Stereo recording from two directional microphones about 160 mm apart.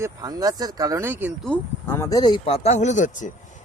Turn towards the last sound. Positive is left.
turn(degrees=50)  # may be behind; listen again after turning